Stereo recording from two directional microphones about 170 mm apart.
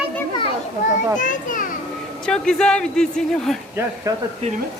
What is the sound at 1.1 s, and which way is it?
Speech, 50° left (ahead or behind).